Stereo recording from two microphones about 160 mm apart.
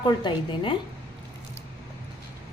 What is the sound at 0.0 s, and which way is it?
Speech, 30° left (ahead or behind).